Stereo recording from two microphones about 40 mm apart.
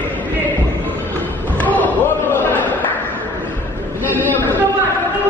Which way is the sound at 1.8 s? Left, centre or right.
Left.